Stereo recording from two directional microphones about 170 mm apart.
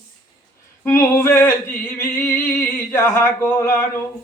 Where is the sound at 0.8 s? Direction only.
15° left (ahead or behind).